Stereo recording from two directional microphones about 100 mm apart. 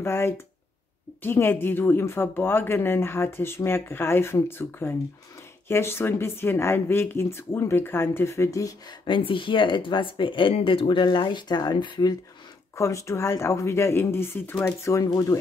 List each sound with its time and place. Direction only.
0.0 s speech: 25° left (ahead or behind)
9.0 s speech: 55° left (ahead or behind)
12.7 s speech: 30° left (ahead or behind)